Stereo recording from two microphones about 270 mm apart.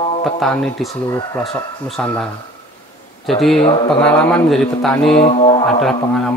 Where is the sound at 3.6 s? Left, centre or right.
Centre.